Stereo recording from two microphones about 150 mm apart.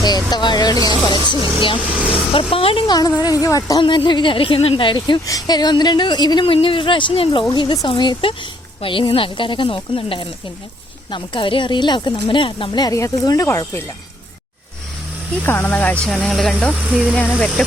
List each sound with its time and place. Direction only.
0.0 s speech: 30° left (ahead or behind)
15.4 s speech: 15° left (ahead or behind)